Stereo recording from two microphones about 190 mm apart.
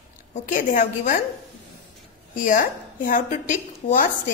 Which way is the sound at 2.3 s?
45° left (ahead or behind).